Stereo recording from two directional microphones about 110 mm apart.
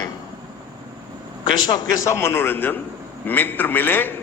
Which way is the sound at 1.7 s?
40° left (ahead or behind).